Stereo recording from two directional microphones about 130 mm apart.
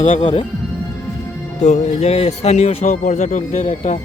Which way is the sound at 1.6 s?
55° left (ahead or behind).